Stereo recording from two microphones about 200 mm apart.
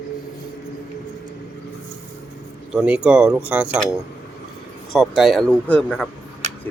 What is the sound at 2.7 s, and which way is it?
Speech, 5° right (ahead or behind).